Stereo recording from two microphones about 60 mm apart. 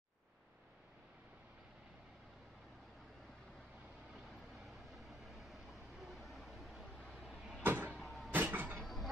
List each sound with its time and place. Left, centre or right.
4.9 s vehicle: centre
7.6 s vehicle: right
8.0 s a sound: centre
8.3 s vehicle: right
8.8 s music: centre